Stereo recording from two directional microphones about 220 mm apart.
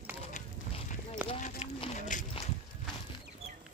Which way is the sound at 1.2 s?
25° left (ahead or behind).